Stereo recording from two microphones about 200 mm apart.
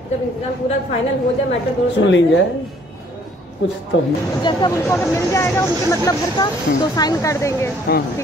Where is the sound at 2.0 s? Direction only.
65° left (ahead or behind).